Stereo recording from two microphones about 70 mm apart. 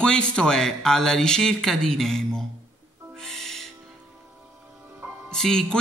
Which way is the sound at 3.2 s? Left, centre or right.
Centre.